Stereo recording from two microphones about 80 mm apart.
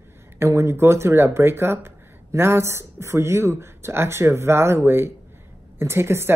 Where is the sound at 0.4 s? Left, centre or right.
Right.